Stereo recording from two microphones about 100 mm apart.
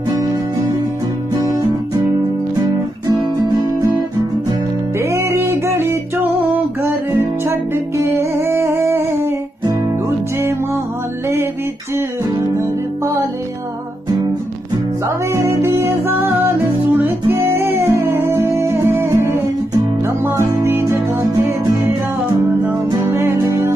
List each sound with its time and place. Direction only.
4.9 s music: 30° right (ahead or behind)
12.5 s music: 30° right (ahead or behind)
15.0 s music: 30° right (ahead or behind)
23.0 s music: 25° right (ahead or behind)